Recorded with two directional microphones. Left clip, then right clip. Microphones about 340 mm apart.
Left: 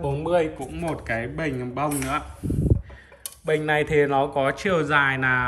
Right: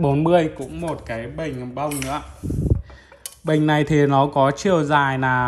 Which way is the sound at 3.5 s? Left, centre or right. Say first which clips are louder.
Right 2 dB; centre.